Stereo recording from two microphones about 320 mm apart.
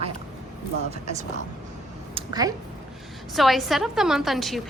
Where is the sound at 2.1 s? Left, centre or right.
Centre.